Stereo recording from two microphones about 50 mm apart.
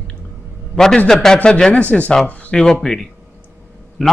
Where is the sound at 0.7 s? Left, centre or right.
Centre; by 2.1 s left.